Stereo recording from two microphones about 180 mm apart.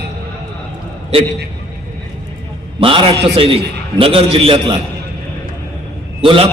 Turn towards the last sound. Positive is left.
turn(degrees=-30)  # may be behind; listen again after turning